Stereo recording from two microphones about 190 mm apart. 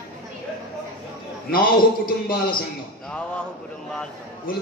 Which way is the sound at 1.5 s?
50° left (ahead or behind).